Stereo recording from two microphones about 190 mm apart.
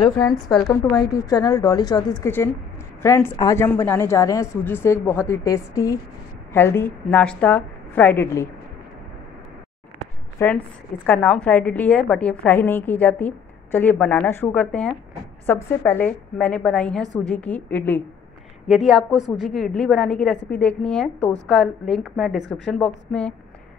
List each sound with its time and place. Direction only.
0.2 s a woman's voice: 5° left (ahead or behind)
0.9 s a woman's voice: 20° left (ahead or behind)
10.4 s a woman's voice: 15° left (ahead or behind)
17.0 s a woman's voice: 20° right (ahead or behind)
17.3 s a woman's voice: 10° left (ahead or behind)
18.7 s a woman's voice: centre (ahead or behind)